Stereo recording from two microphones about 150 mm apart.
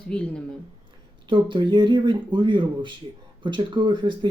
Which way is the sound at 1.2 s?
30° right (ahead or behind).